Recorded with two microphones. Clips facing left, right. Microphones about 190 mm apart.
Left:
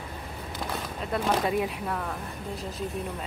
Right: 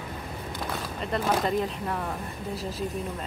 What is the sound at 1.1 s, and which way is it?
Speech, 5° left (ahead or behind).